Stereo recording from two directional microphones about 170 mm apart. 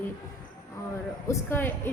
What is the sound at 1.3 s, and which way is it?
Speech, 15° left (ahead or behind).